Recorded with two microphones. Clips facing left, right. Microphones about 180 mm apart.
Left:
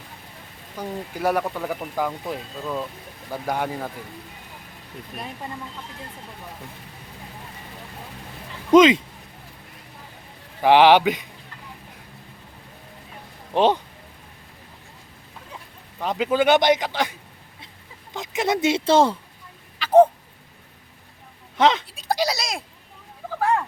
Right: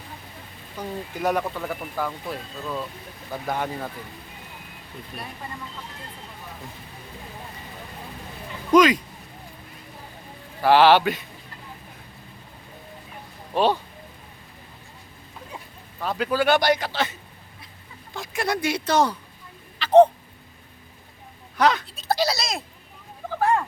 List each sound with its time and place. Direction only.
0.8 s speech: 10° left (ahead or behind)
8.7 s a man's voice: 25° left (ahead or behind)
10.6 s speech: 15° left (ahead or behind)
13.5 s a man's voice: 20° left (ahead or behind)
16.0 s a man's voice: 20° left (ahead or behind)
19.8 s a sound: 10° left (ahead or behind)
21.6 s speech: 25° left (ahead or behind)
21.9 s a sound: 15° left (ahead or behind)